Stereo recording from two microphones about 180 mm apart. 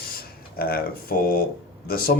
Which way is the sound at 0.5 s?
55° left (ahead or behind).